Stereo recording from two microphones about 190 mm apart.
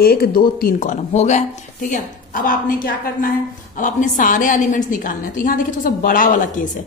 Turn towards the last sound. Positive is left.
turn(degrees=45)  # may be behind; listen again after turning